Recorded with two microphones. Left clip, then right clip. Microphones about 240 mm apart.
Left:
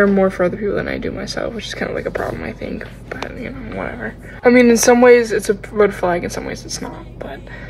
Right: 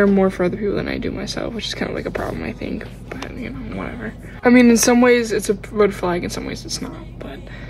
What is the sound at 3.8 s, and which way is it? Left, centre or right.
Speech, centre.